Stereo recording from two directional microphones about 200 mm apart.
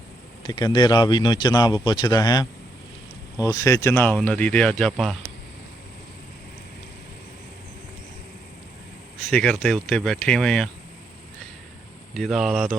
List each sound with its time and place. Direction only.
0.4 s speech: 20° left (ahead or behind); by 5.1 s centre (ahead or behind)
9.3 s speech: 5° left (ahead or behind)
12.1 s speech: centre (ahead or behind)